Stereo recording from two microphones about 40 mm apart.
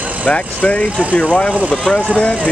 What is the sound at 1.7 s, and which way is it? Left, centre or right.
Speech, centre.